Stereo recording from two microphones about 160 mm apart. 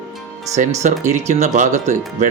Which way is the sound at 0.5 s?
45° right (ahead or behind).